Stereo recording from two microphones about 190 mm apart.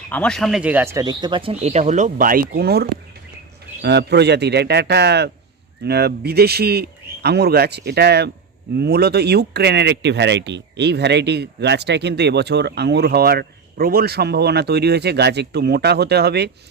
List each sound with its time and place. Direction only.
0.1 s speech: 5° left (ahead or behind); by 16.5 s 60° right (ahead or behind)